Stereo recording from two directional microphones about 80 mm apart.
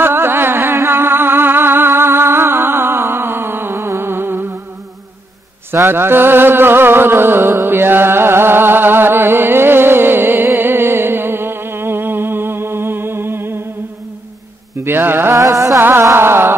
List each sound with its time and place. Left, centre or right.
0.0 s music: right
5.7 s music: right
14.8 s mantra: right
15.3 s music: right
15.8 s music: right